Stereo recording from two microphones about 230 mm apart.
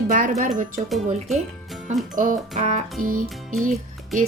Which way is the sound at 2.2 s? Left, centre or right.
Right.